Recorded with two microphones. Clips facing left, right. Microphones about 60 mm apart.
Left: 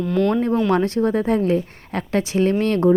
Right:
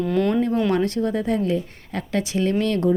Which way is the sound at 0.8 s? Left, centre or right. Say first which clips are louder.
Left 3 dB; left.